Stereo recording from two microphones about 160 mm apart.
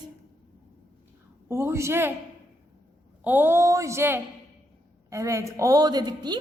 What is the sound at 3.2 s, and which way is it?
Speech, 15° right (ahead or behind).